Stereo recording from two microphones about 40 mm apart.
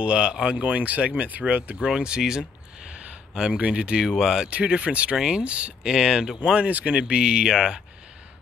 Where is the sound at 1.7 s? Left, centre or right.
Right.